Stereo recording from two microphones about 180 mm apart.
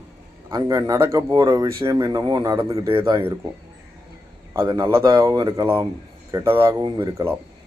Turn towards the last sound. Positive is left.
turn(degrees=-20)  # may be behind; listen again after turning